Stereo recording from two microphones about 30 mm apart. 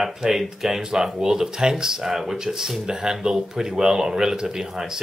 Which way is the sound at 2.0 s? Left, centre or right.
Centre.